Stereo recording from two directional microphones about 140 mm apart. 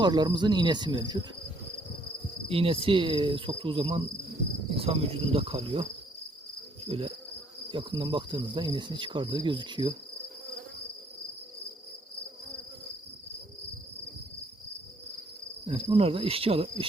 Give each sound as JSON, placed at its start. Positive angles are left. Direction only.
{"t": 0.0, "sound": "cricket", "side_deg": -30}
{"t": 2.5, "sound": "cricket", "side_deg": -40}
{"t": 4.7, "sound": "insect", "side_deg": -45}
{"t": 6.8, "sound": "insect", "side_deg": -45}
{"t": 7.7, "sound": "cricket", "side_deg": -35}
{"t": 15.6, "sound": "cricket", "side_deg": -40}